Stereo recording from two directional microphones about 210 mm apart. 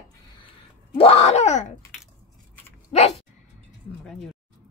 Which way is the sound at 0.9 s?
30° left (ahead or behind).